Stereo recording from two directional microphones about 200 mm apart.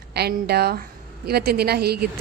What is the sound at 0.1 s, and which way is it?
A woman's voice, 55° right (ahead or behind).